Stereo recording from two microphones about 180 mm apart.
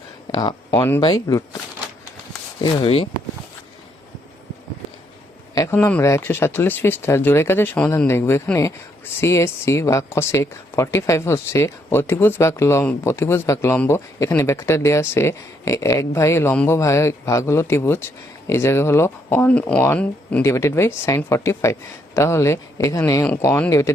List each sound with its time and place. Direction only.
0.3 s speech: 20° left (ahead or behind)
2.6 s speech: 30° left (ahead or behind)
5.5 s speech: 10° left (ahead or behind)